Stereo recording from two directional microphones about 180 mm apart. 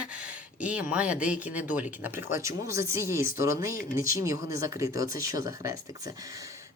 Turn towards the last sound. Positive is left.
turn(degrees=-20)  # may be behind; listen again after turning